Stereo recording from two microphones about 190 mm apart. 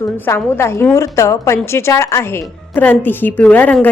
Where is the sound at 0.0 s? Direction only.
15° left (ahead or behind).